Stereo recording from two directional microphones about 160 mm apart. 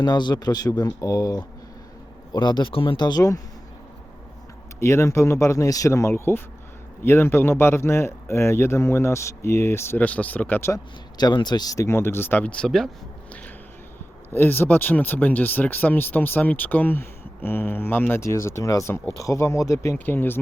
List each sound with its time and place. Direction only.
0.0 s speech: 25° left (ahead or behind)
4.8 s speech: 15° left (ahead or behind)
11.2 s speech: 25° left (ahead or behind); by 12.9 s 5° left (ahead or behind)
14.3 s speech: 10° left (ahead or behind)